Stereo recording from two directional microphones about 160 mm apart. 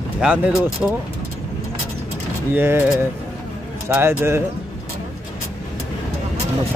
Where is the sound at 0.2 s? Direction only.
5° right (ahead or behind).